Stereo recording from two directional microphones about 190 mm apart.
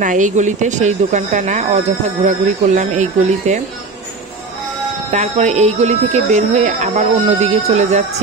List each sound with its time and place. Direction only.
0.0 s speech: 40° right (ahead or behind)
5.1 s speech: 40° right (ahead or behind)